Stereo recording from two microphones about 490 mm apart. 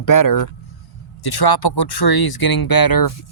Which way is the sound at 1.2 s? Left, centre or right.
Left.